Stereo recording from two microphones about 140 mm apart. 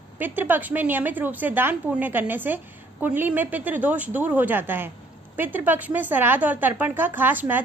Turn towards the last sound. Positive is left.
turn(degrees=-15)  # may be behind; listen again after turning